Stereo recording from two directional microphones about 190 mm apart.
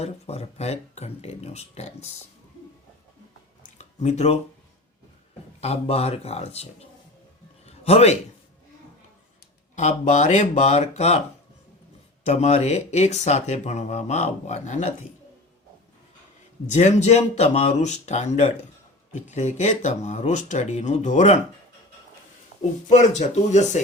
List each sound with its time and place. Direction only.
0.0 s speech: 35° left (ahead or behind)
3.8 s a sound: 35° left (ahead or behind)
5.5 s speech: 35° left (ahead or behind)
7.6 s a sound: 35° left (ahead or behind)
9.7 s speech: 40° left (ahead or behind)
12.2 s speech: 35° left (ahead or behind)
16.6 s speech: 35° left (ahead or behind)
22.9 s speech: 40° left (ahead or behind)